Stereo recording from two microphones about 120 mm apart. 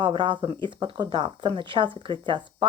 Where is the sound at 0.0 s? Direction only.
45° right (ahead or behind).